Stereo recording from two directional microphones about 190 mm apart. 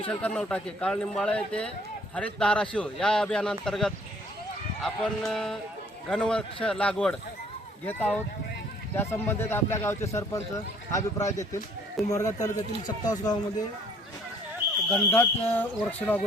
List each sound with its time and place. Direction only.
0.1 s a man's voice: 5° left (ahead or behind)
14.8 s speech: 10° left (ahead or behind)